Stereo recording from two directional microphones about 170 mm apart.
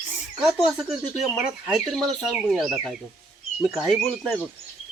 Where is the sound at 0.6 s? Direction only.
Centre (ahead or behind).